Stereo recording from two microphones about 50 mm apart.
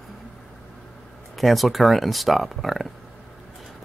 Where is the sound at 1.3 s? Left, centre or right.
Centre.